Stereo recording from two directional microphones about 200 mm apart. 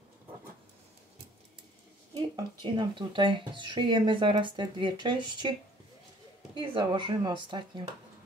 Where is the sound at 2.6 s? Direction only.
25° right (ahead or behind).